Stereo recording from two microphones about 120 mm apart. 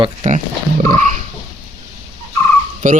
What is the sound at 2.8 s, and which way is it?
Dog, 90° right.